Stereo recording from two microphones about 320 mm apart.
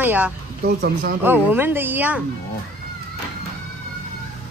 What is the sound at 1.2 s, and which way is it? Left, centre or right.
Speech, centre.